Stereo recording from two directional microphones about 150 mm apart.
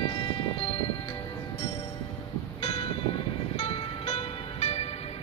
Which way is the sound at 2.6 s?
40° left (ahead or behind).